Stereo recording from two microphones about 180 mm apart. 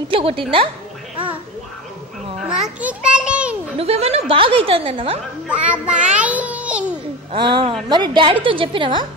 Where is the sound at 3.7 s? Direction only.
35° right (ahead or behind).